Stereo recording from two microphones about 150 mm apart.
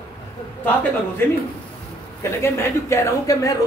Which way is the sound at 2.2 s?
15° left (ahead or behind).